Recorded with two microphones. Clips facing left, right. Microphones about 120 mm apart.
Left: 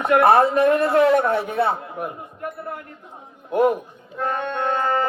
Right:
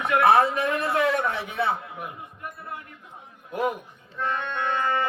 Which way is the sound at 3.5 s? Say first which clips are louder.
Left 9 dB; 45° left (ahead or behind).